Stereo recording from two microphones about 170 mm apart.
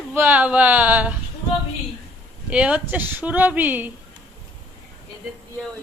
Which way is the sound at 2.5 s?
5° right (ahead or behind).